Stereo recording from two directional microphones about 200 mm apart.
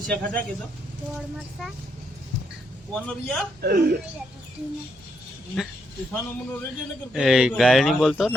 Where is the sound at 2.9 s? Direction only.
Centre (ahead or behind).